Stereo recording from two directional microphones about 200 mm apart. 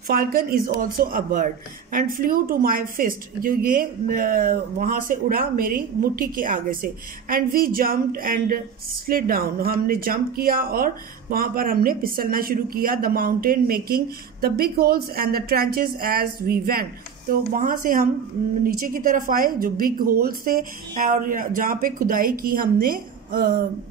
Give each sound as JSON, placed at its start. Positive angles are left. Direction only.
{"t": 0.1, "sound": "a woman's voice", "side_deg": -45}